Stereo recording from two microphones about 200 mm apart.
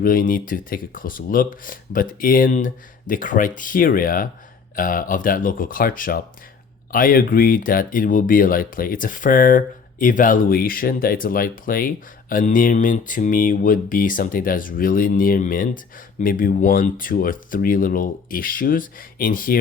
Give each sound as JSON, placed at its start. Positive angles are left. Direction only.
{"t": 0.0, "sound": "speech", "side_deg": 45}